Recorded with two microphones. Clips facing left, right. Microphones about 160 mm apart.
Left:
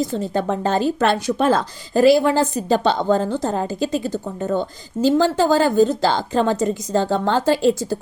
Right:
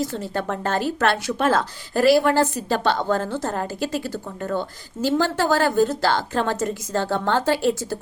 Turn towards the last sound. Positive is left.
turn(degrees=15)  # may be behind; listen again after turning